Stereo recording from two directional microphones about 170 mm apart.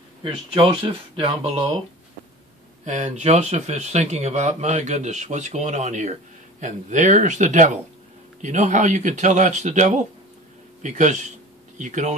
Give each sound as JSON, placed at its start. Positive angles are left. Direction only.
{"t": 0.2, "sound": "speech", "side_deg": -30}
{"t": 2.8, "sound": "speech", "side_deg": -45}